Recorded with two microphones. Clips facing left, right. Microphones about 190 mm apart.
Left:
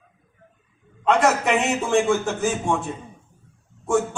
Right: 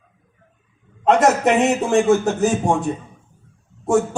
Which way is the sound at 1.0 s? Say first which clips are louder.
Right 4 dB; 45° right (ahead or behind).